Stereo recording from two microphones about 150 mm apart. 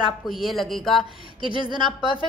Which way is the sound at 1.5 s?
30° right (ahead or behind).